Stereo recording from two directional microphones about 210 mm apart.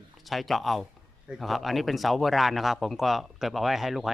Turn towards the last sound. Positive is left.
turn(degrees=0)  # may be behind; listen again after turning